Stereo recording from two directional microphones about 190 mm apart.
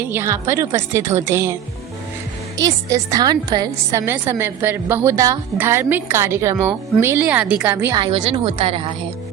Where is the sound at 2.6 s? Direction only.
15° right (ahead or behind).